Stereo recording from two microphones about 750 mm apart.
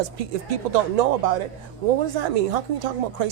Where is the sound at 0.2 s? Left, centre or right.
Right.